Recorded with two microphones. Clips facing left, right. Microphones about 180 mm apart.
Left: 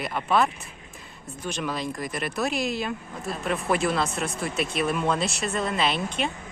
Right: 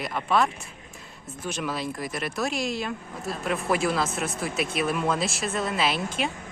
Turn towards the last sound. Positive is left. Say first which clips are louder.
# even
turn(degrees=-5)  # may be behind; listen again after turning